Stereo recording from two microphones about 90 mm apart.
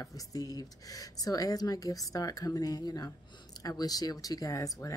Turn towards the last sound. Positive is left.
turn(degrees=40)  # may be behind; listen again after turning